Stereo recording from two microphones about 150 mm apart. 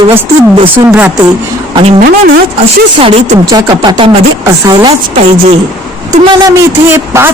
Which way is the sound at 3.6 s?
25° right (ahead or behind).